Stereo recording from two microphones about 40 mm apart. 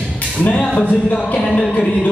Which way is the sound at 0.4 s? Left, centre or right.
Left.